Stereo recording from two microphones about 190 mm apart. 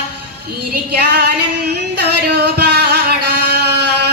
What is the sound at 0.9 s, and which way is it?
Female singing, 55° right (ahead or behind).